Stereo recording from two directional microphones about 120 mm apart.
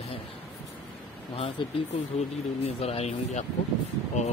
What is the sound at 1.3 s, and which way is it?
Speech, 60° left (ahead or behind).